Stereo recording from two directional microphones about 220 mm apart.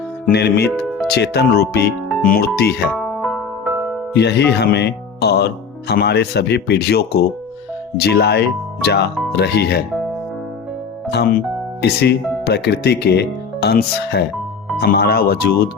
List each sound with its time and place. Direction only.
0.3 s speech: 50° left (ahead or behind)
0.7 s speech: centre (ahead or behind)
1.1 s speech: 45° left (ahead or behind)
2.9 s music: centre (ahead or behind)
4.1 s speech: 50° left (ahead or behind)
11.1 s speech: 45° left (ahead or behind)